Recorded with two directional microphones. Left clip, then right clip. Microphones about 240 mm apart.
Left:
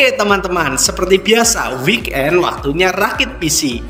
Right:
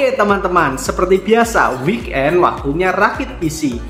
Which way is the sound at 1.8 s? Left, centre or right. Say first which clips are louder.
Left 2 dB; left.